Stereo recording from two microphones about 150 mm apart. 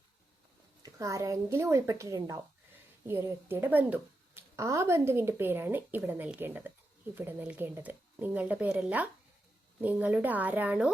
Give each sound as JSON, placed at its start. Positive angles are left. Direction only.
{"t": 0.8, "sound": "a woman's voice", "side_deg": -20}